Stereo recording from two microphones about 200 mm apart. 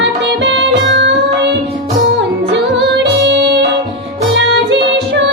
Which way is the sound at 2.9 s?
60° right (ahead or behind).